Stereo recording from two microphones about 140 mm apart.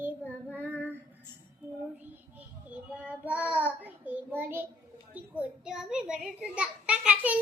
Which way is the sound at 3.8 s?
10° right (ahead or behind).